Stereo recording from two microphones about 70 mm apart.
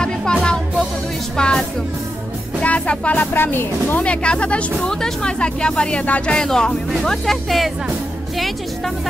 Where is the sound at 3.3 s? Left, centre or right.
Left.